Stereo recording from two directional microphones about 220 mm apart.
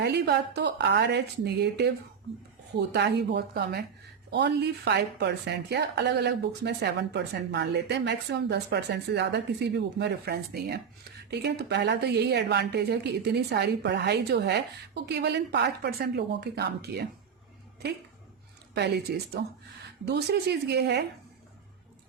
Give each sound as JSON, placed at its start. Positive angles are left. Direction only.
{"t": 0.0, "sound": "a woman's voice", "side_deg": -50}
{"t": 18.7, "sound": "a woman's voice", "side_deg": -50}